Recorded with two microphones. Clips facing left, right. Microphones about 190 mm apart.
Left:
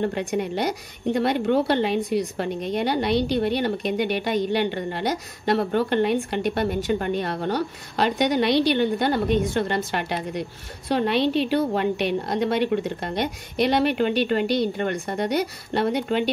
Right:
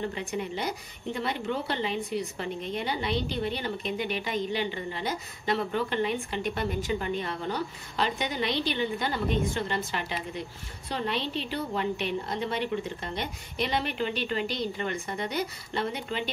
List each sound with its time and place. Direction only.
0.0 s a woman's voice: 75° left (ahead or behind)
5.7 s a woman's voice: 60° left (ahead or behind)